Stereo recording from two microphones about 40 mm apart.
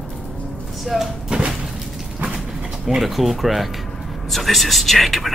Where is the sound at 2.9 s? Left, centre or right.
Centre.